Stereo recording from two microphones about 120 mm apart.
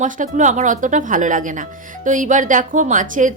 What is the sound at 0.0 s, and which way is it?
A woman's voice, 90° right.